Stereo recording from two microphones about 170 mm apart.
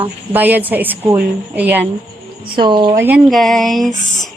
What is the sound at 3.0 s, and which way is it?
Speech, 10° right (ahead or behind).